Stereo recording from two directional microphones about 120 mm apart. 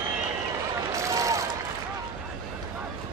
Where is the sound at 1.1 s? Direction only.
25° right (ahead or behind).